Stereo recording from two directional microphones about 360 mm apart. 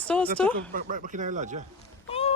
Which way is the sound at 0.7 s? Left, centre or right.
Right.